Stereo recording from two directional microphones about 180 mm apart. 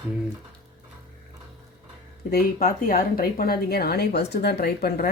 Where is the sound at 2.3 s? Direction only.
50° left (ahead or behind).